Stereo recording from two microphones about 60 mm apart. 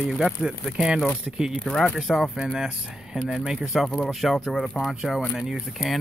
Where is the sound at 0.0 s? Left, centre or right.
Centre.